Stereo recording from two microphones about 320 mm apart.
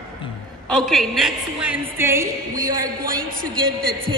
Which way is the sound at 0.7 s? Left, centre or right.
Centre.